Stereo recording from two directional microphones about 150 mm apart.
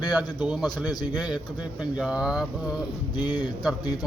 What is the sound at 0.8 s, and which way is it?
Speech, 25° left (ahead or behind).